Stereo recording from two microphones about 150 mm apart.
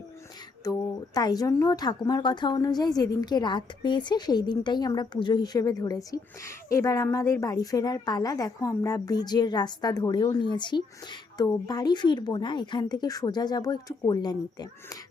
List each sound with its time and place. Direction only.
0.6 s speech: 25° left (ahead or behind)